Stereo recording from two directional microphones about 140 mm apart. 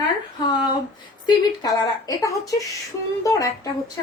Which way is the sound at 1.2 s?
30° left (ahead or behind).